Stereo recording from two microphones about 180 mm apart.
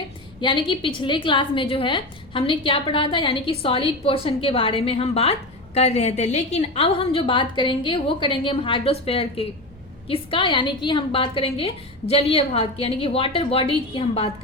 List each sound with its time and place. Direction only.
0.4 s a woman's voice: 25° left (ahead or behind)